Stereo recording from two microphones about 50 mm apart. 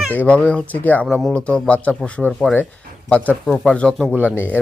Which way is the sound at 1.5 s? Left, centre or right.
Left.